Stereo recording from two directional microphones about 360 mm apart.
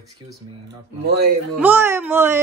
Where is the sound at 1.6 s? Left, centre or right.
Centre.